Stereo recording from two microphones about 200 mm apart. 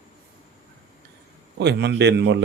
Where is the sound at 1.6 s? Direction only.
55° right (ahead or behind).